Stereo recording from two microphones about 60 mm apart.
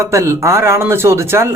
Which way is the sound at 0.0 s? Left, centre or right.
Right.